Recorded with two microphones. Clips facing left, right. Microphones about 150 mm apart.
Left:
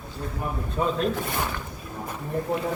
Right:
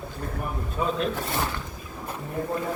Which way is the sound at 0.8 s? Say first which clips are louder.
Left 2 dB; 30° left (ahead or behind).